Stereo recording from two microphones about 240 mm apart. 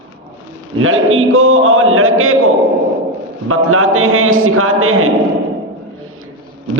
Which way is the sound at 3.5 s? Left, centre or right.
Right.